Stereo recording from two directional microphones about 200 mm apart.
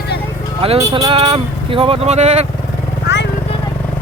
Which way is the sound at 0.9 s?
30° right (ahead or behind).